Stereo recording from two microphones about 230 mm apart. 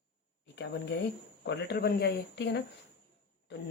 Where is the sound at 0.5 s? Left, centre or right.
Left.